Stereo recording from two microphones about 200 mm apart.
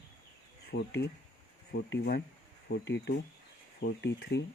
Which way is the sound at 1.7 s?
55° left (ahead or behind).